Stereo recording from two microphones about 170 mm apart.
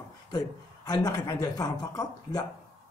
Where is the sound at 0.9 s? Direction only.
25° left (ahead or behind).